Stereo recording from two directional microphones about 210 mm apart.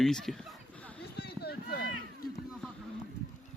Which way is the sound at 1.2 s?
50° left (ahead or behind).